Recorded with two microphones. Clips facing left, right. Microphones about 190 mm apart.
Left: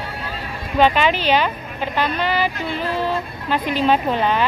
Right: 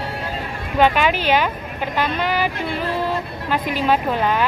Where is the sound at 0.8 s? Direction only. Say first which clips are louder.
Even; 10° right (ahead or behind).